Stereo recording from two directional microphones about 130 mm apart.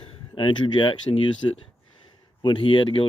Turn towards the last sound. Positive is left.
turn(degrees=40)  # may be behind; listen again after turning